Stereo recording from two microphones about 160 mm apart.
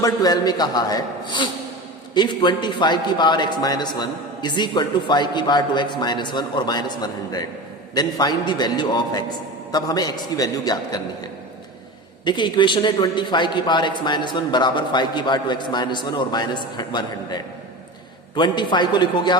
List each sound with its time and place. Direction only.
0.0 s a man's voice: 25° left (ahead or behind)
12.2 s a man's voice: 30° left (ahead or behind)